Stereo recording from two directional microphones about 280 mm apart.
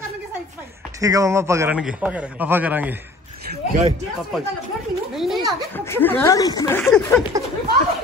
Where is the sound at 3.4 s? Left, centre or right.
Right.